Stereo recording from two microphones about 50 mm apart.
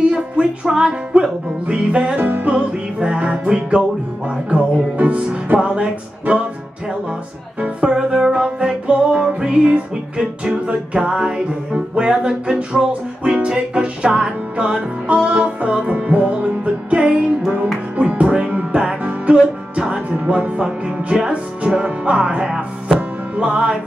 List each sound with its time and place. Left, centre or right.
0.1 s music: centre
2.1 s music: right; by 3.8 s centre
4.5 s music: right
7.9 s music: centre